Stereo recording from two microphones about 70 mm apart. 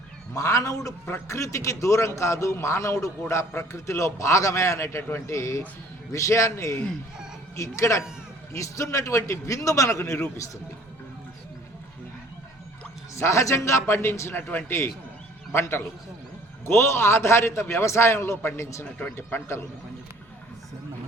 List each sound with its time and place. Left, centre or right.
0.3 s a man's voice: left
13.1 s a man's voice: left
18.9 s a man's voice: left